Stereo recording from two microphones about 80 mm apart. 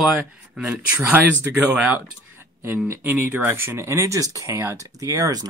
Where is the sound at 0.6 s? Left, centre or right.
Centre.